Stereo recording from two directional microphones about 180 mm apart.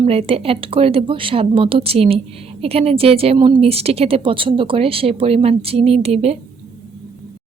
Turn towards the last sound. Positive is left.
turn(degrees=-35)  # may be behind; listen again after turning